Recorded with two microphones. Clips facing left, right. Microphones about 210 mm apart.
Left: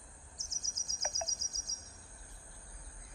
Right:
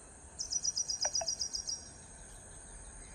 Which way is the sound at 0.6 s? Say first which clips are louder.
Left 1 dB; 50° right (ahead or behind).